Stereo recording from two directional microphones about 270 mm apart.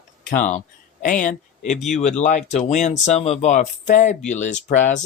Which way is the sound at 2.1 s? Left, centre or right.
Left.